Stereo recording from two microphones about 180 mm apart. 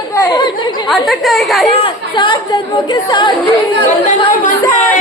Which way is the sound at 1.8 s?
25° left (ahead or behind).